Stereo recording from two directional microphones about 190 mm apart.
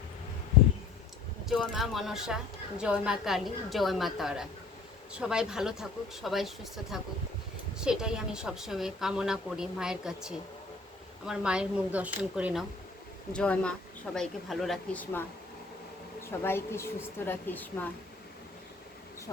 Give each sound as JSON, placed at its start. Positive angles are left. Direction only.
{"t": 1.5, "sound": "a woman's voice", "side_deg": 0}
{"t": 7.8, "sound": "a woman's voice", "side_deg": -5}
{"t": 13.3, "sound": "a woman's voice", "side_deg": 5}
{"t": 16.2, "sound": "a woman's voice", "side_deg": 10}